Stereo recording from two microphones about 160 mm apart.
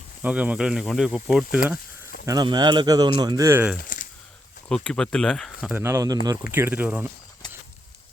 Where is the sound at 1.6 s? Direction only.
10° right (ahead or behind).